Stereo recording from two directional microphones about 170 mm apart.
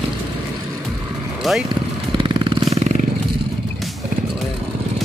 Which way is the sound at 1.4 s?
Centre (ahead or behind).